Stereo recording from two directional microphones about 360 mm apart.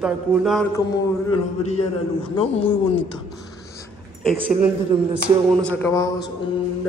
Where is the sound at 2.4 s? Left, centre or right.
Centre.